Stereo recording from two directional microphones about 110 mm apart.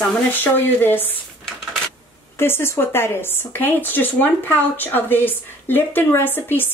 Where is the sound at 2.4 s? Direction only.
20° left (ahead or behind).